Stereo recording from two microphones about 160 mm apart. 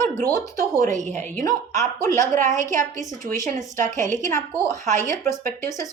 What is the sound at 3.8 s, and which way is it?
A woman's voice, 50° right (ahead or behind).